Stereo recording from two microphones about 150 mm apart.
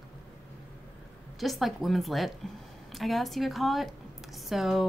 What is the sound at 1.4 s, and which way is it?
A woman's voice, centre (ahead or behind).